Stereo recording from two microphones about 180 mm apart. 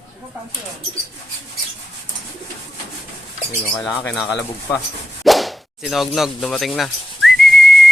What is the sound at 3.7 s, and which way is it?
Speech, centre (ahead or behind).